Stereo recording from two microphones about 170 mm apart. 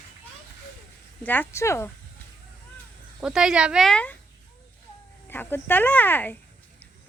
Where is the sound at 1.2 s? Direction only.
10° left (ahead or behind).